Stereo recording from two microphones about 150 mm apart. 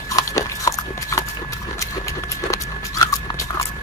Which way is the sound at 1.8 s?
20° left (ahead or behind).